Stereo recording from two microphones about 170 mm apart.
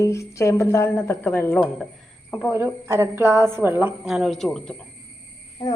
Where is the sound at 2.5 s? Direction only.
15° right (ahead or behind); by 4.8 s 5° left (ahead or behind).